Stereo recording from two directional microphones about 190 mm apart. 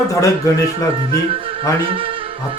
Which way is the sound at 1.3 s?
30° right (ahead or behind).